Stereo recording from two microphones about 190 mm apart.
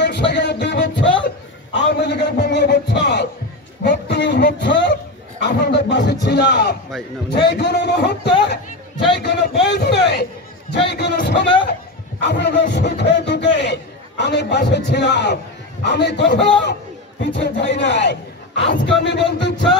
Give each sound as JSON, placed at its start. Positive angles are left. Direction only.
{"t": 0.0, "sound": "music", "side_deg": 65}
{"t": 1.7, "sound": "a man's voice", "side_deg": 65}